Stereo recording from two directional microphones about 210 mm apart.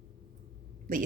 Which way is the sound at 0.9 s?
40° right (ahead or behind).